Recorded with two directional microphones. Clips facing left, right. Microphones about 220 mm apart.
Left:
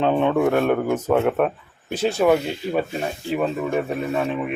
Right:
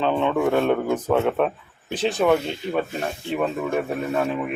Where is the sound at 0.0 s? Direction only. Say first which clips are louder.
Left 2 dB; 15° left (ahead or behind).